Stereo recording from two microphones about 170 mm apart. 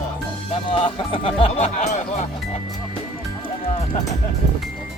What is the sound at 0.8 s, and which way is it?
Speech, 35° left (ahead or behind).